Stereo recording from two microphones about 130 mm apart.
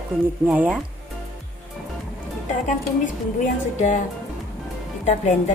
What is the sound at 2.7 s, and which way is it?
Speech, 75° left (ahead or behind).